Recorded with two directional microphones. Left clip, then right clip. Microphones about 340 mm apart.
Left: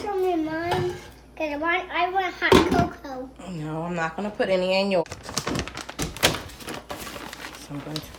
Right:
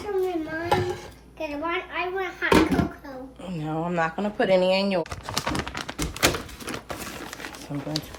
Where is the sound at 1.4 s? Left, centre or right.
Left.